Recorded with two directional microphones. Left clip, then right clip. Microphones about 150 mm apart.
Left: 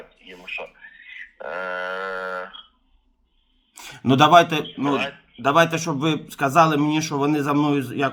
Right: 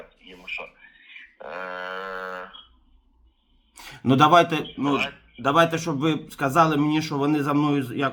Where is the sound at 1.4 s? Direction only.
15° left (ahead or behind).